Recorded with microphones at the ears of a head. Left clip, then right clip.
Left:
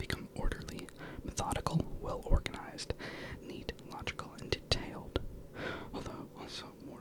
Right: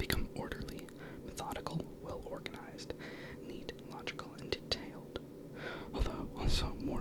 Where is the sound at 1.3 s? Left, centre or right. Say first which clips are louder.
Left 5 dB; left.